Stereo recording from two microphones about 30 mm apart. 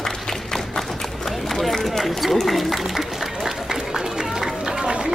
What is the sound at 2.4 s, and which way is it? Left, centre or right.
Speech, centre.